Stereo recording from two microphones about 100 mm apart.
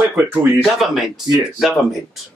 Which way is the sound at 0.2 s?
20° right (ahead or behind).